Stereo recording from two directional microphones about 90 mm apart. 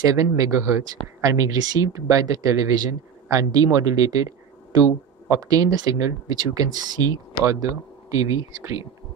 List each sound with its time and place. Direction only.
0.1 s speech: 40° right (ahead or behind)
5.3 s speech: 40° right (ahead or behind)